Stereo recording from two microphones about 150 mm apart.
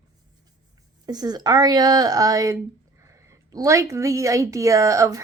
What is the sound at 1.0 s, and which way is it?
Speech, 25° right (ahead or behind).